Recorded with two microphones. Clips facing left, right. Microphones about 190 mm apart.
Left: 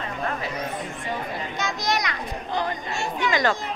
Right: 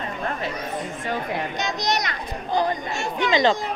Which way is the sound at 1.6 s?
20° right (ahead or behind).